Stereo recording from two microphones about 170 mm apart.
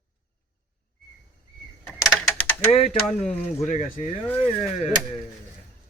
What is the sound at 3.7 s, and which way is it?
Speech, 50° left (ahead or behind).